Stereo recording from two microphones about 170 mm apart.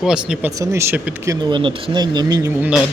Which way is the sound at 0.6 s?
15° right (ahead or behind).